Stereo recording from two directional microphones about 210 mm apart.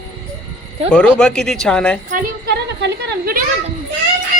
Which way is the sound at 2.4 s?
50° right (ahead or behind).